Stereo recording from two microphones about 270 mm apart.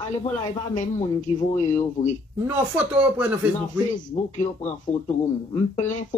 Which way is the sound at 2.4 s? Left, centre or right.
Centre.